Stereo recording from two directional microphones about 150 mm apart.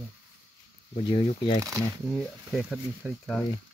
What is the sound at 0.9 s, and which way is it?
Speech, 35° left (ahead or behind).